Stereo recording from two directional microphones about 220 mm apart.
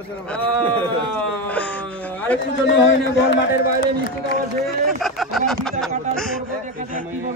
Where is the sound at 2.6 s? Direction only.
55° left (ahead or behind).